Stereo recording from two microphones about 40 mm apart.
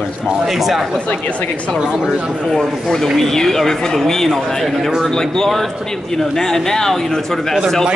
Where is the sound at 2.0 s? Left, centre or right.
Centre.